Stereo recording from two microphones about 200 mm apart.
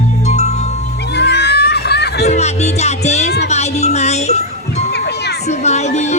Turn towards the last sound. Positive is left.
turn(degrees=35)  # may be behind; listen again after turning